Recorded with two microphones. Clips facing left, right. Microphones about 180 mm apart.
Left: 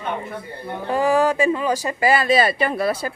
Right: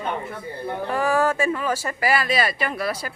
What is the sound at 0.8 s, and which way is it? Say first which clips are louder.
Speech: left 4 dB; 20° left (ahead or behind).